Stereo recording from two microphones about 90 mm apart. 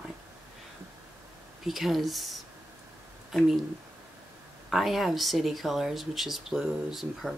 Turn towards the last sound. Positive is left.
turn(degrees=-5)  # may be behind; listen again after turning